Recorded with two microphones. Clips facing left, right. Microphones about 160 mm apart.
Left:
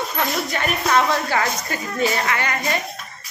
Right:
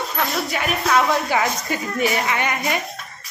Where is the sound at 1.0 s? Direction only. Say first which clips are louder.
Right 1 dB; 20° right (ahead or behind).